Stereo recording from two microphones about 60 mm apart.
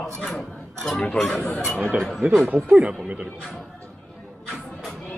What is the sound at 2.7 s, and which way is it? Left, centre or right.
Speech, centre.